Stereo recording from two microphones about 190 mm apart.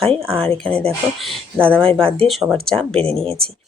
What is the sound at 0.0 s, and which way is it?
Speech, 30° right (ahead or behind).